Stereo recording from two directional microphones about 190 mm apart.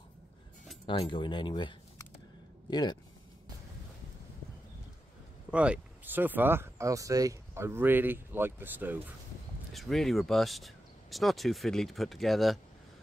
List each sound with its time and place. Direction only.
0.8 s speech: 25° left (ahead or behind)
5.5 s speech: 5° right (ahead or behind)
9.7 s speech: centre (ahead or behind)